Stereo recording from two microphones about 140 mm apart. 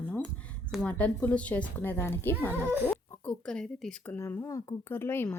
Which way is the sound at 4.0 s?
15° left (ahead or behind).